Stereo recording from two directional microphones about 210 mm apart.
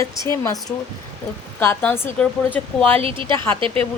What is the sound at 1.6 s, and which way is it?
Speech, 10° left (ahead or behind).